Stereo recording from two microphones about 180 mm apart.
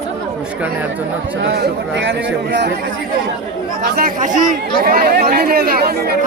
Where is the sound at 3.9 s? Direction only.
50° right (ahead or behind).